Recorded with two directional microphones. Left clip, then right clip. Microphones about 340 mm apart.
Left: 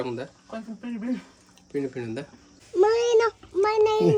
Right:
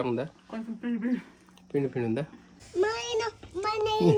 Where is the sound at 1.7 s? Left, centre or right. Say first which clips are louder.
Right 1 dB; centre.